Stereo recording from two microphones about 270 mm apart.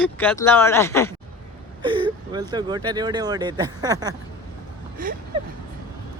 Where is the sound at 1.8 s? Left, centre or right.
Centre.